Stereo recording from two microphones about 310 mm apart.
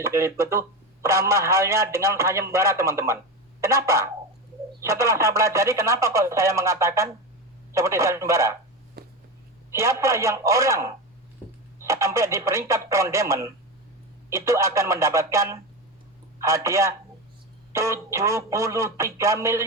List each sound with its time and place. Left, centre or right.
0.0 s speech: centre
9.0 s a sound: right
9.7 s speech: centre